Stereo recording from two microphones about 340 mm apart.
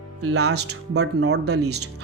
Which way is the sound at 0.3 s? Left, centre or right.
Right.